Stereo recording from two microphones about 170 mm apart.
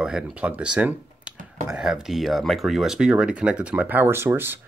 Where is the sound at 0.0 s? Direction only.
5° right (ahead or behind).